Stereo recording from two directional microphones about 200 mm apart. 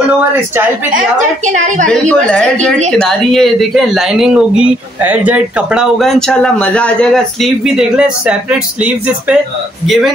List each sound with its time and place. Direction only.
0.9 s a woman's voice: 40° right (ahead or behind)
1.9 s speech: 5° left (ahead or behind)